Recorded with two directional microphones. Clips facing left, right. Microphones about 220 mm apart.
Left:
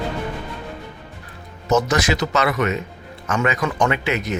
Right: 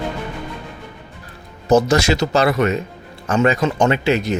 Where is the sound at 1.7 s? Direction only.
30° right (ahead or behind).